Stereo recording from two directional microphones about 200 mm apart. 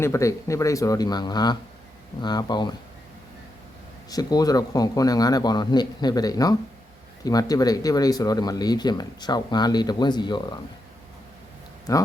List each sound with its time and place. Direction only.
0.0 s speech: 15° left (ahead or behind)
4.1 s speech: 20° left (ahead or behind)
11.9 s speech: 15° left (ahead or behind)